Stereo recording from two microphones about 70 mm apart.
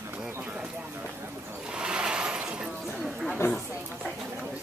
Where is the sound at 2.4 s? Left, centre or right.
Centre.